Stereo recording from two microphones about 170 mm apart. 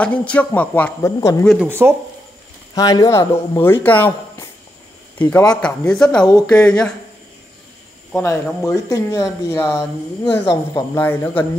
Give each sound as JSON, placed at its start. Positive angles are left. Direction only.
{"t": 0.0, "sound": "speech", "side_deg": 5}
{"t": 1.4, "sound": "speech", "side_deg": 0}
{"t": 1.7, "sound": "speech", "side_deg": -15}
{"t": 2.7, "sound": "speech", "side_deg": 20}
{"t": 5.5, "sound": "speech", "side_deg": 5}
{"t": 8.1, "sound": "speech", "side_deg": 10}